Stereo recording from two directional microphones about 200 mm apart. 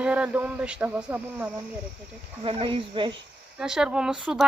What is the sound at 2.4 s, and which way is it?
Speech, 25° right (ahead or behind).